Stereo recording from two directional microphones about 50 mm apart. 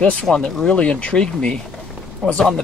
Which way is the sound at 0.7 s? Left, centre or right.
Left.